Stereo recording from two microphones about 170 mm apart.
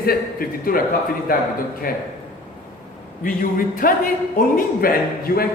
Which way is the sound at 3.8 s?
55° left (ahead or behind).